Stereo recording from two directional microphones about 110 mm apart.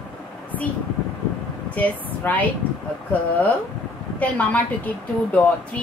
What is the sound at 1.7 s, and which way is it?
Speech, 15° left (ahead or behind).